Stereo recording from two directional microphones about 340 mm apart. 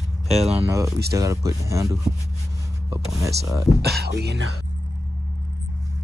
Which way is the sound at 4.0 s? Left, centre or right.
Right.